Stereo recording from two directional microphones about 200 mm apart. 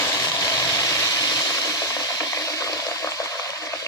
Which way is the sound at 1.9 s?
15° left (ahead or behind).